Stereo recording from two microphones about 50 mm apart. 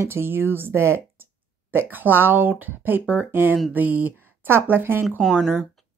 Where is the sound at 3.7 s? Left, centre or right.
Right.